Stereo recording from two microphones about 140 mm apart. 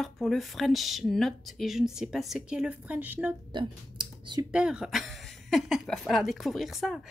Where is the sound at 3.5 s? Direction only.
35° right (ahead or behind).